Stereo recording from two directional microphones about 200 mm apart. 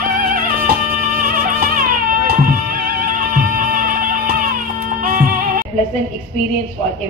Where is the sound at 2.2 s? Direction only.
45° right (ahead or behind).